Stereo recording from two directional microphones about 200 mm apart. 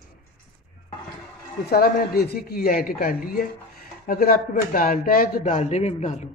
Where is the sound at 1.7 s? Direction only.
50° left (ahead or behind).